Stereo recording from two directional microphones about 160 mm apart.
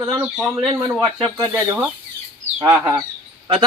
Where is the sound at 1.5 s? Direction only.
15° right (ahead or behind).